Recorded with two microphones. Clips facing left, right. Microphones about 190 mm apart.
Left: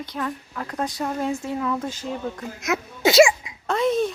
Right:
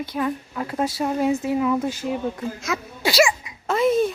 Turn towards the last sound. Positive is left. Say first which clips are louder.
# right 2 dB
turn(degrees=-5)  # may be behind; listen again after turning